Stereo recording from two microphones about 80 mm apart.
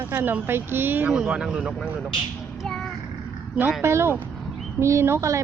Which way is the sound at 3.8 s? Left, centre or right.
Right.